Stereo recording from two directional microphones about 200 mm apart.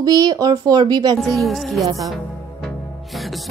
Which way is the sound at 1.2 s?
Centre (ahead or behind).